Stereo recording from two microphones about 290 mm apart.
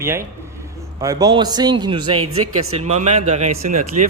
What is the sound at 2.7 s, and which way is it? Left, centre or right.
Speech, right.